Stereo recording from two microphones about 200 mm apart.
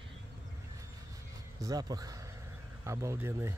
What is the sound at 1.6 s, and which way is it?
Speech, 20° right (ahead or behind).